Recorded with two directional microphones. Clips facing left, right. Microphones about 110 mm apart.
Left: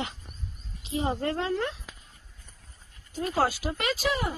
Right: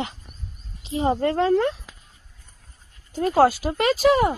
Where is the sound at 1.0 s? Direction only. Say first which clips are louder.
Right 8 dB; 45° right (ahead or behind).